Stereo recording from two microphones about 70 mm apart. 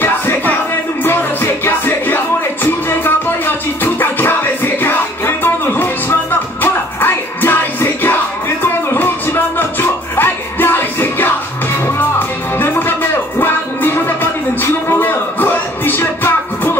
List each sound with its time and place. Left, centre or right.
0.0 s music: left
12.5 s music: left